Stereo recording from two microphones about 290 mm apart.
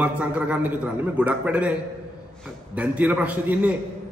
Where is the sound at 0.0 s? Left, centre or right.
Centre.